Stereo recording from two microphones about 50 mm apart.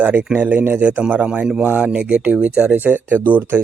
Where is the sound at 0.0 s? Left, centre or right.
Right.